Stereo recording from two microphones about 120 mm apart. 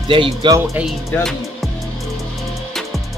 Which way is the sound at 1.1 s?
15° left (ahead or behind).